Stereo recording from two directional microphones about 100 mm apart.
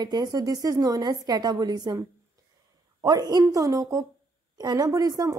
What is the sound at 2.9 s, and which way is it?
Speech, 40° right (ahead or behind).